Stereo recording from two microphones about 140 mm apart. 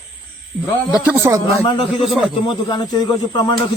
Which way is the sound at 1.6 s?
40° left (ahead or behind).